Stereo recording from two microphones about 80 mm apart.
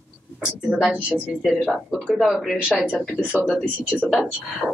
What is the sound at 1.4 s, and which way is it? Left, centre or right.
Speech, centre.